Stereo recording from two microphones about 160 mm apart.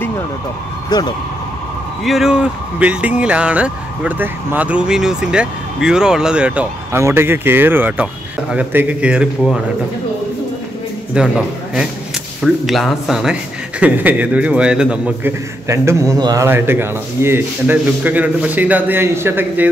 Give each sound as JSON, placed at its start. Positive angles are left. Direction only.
{"t": 0.8, "sound": "speech", "side_deg": 25}
{"t": 2.0, "sound": "speech", "side_deg": 0}
{"t": 11.1, "sound": "a man's voice", "side_deg": -5}
{"t": 15.7, "sound": "a man's voice", "side_deg": -15}